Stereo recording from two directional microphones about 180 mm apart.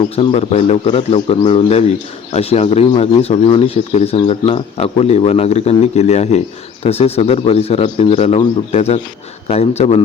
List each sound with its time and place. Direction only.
0.0 s a man's voice: 30° left (ahead or behind)